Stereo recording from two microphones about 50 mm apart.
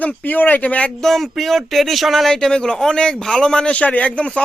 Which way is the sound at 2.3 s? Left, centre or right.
Centre.